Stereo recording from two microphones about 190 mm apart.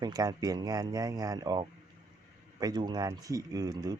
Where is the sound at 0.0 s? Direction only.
20° right (ahead or behind).